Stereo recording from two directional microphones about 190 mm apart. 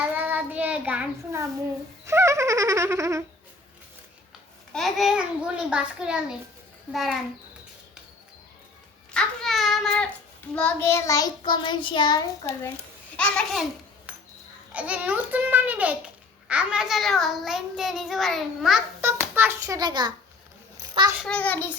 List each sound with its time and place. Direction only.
0.1 s child singing: 10° right (ahead or behind)
2.0 s a sound: 15° right (ahead or behind)
4.7 s a child's voice: centre (ahead or behind)
9.1 s a sound: centre (ahead or behind)
10.5 s a child's voice: 10° left (ahead or behind)
13.1 s a child's voice: 5° left (ahead or behind)
14.1 s a sound: 5° right (ahead or behind)
14.7 s a child's voice: 5° right (ahead or behind)
19.0 s a child's voice: 10° right (ahead or behind)
21.2 s a child's voice: 5° left (ahead or behind)